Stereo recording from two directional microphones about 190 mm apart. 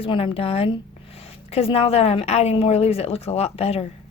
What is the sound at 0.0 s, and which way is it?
Speech, 25° left (ahead or behind).